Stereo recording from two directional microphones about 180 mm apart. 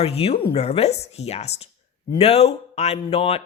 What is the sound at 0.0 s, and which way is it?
A woman's voice, 35° left (ahead or behind).